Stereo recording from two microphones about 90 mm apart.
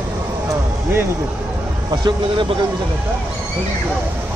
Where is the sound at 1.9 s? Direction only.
50° right (ahead or behind).